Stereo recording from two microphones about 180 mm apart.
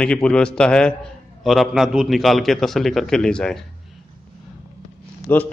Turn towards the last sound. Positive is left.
turn(degrees=10)  # may be behind; listen again after turning